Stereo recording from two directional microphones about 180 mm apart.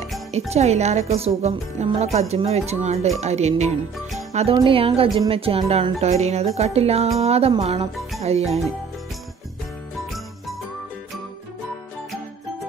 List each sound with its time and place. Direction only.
0.5 s music: 40° right (ahead or behind)
4.3 s speech: 35° right (ahead or behind)
4.6 s music: 30° right (ahead or behind)